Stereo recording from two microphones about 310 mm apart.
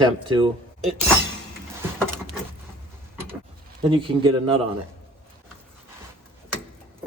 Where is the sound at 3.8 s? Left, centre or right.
Centre.